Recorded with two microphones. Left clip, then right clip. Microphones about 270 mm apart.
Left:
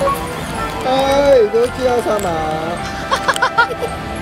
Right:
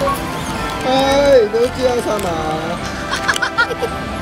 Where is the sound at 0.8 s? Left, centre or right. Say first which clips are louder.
Even; left.